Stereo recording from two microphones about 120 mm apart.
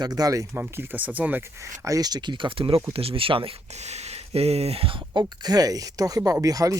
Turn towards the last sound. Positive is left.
turn(degrees=-30)  # may be behind; listen again after turning